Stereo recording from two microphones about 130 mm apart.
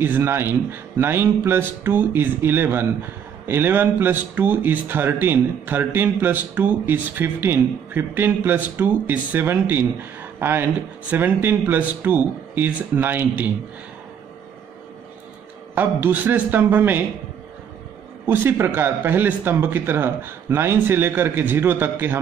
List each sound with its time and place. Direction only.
0.0 s speech: 15° right (ahead or behind)
15.7 s speech: 15° right (ahead or behind)
18.2 s speech: 20° right (ahead or behind)